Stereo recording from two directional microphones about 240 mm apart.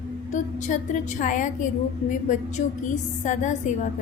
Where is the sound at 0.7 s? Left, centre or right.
Left.